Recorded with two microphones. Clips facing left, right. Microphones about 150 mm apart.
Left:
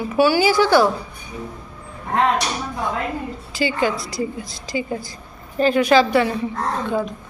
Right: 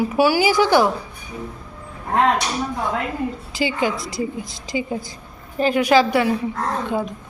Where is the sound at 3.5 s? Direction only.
15° right (ahead or behind).